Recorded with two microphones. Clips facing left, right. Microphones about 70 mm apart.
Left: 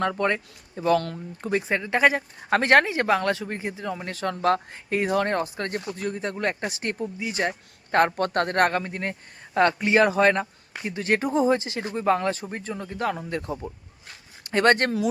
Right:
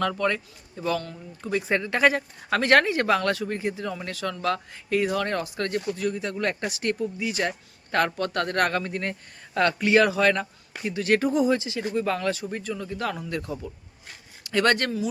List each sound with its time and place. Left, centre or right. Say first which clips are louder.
0.0 s speech: left 1 dB; left
0.9 s speech: left 6 dB; left
1.7 s speech: even; centre
2.5 s speech: left 1 dB; left
4.1 s speech: left 5 dB; left
8.8 s speech: right 1 dB; centre; by 14.9 s left